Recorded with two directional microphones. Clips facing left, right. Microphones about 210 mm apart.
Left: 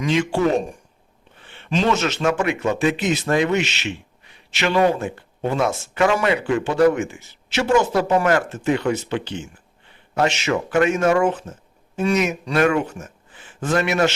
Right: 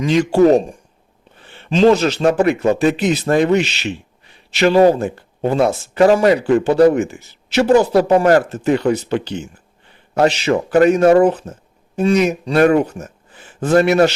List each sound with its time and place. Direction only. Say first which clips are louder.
0.0 s speech: right 7 dB; 40° right (ahead or behind)